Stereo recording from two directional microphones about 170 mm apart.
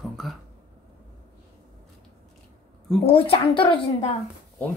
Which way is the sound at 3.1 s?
35° left (ahead or behind).